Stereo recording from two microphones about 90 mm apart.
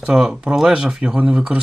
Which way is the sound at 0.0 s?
5° right (ahead or behind).